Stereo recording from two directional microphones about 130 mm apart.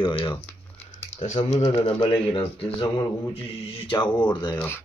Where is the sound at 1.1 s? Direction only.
55° left (ahead or behind).